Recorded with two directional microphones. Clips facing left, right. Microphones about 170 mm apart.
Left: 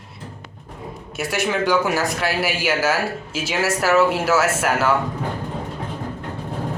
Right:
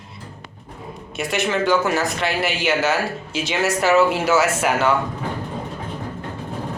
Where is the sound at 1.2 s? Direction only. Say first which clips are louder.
Right 1 dB; 5° left (ahead or behind).